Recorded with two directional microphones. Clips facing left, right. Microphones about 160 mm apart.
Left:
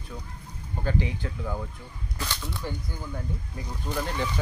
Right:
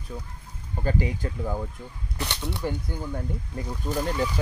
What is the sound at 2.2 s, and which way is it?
Speech, 20° right (ahead or behind).